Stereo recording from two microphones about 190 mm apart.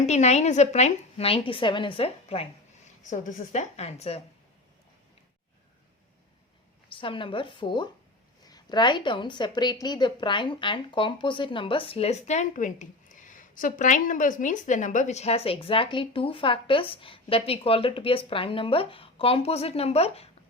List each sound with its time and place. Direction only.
0.0 s a woman's voice: 35° left (ahead or behind)
3.0 s a woman's voice: 40° left (ahead or behind)
6.8 s a woman's voice: 25° left (ahead or behind)